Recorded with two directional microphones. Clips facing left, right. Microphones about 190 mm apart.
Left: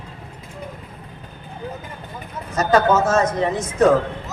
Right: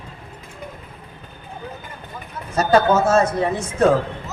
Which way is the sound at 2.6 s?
10° right (ahead or behind).